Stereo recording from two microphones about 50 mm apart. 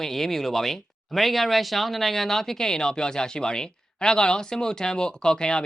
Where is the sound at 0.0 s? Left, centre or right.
Centre.